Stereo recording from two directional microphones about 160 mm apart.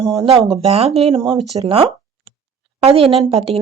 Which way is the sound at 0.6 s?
40° right (ahead or behind).